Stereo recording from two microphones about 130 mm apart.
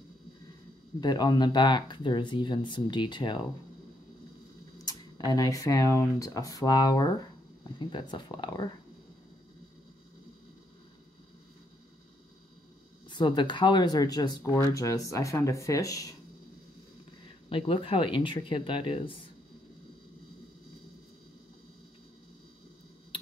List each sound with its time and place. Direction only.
1.0 s speech: 30° left (ahead or behind)
4.8 s speech: 30° left (ahead or behind)
13.1 s speech: 35° left (ahead or behind)
17.5 s speech: 45° left (ahead or behind)